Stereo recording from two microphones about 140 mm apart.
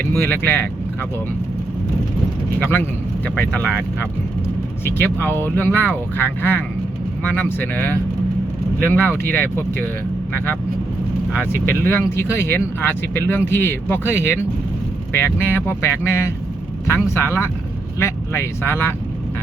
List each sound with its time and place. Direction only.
0.4 s speech: 15° left (ahead or behind)
2.6 s speech: 15° left (ahead or behind)
11.3 s speech: 15° left (ahead or behind)